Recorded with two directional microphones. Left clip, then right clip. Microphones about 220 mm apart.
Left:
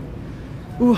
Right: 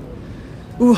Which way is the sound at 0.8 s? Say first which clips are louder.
Right 3 dB; 15° right (ahead or behind).